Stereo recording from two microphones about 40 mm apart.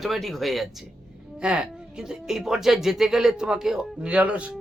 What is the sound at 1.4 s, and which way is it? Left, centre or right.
Speech, right.